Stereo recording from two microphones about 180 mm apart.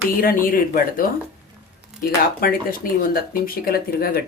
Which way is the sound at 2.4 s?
55° left (ahead or behind).